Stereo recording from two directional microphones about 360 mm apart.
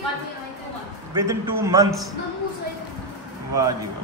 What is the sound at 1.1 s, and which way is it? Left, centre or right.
Speech, centre.